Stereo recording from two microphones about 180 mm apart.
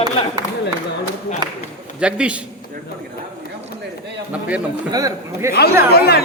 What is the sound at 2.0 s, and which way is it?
Speech, 5° right (ahead or behind).